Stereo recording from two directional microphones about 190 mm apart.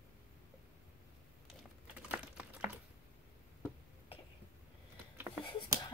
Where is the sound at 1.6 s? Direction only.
5° right (ahead or behind).